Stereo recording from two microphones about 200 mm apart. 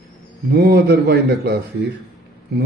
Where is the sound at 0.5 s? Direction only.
50° right (ahead or behind).